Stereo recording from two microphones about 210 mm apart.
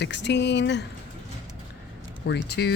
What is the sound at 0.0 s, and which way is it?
Speech, 55° left (ahead or behind).